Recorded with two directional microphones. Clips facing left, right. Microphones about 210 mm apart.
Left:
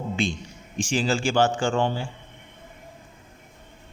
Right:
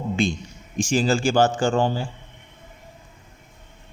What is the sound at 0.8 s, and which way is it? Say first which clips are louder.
A man's voice: right 4 dB; 40° right (ahead or behind).